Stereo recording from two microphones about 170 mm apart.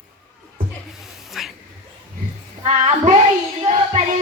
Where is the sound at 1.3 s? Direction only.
Centre (ahead or behind).